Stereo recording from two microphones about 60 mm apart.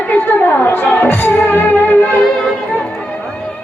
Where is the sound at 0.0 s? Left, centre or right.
Left.